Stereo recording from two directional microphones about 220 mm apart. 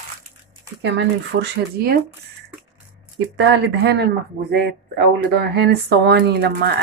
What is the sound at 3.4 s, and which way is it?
Speech, 50° right (ahead or behind).